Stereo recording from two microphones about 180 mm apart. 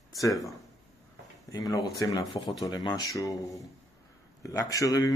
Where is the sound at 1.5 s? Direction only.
20° left (ahead or behind).